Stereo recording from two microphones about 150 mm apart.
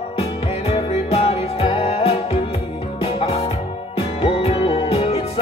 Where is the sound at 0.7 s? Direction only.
40° left (ahead or behind).